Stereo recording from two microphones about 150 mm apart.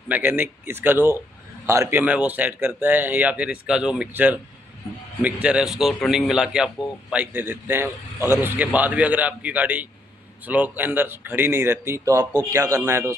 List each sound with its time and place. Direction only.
0.1 s a man's voice: 15° right (ahead or behind)